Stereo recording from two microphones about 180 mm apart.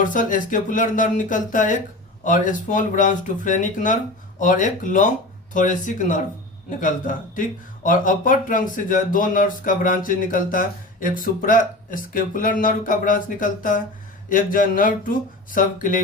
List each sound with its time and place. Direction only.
0.0 s speech: 45° left (ahead or behind)